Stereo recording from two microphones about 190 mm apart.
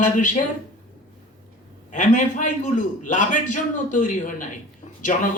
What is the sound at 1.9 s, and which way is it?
A man's voice, 40° left (ahead or behind).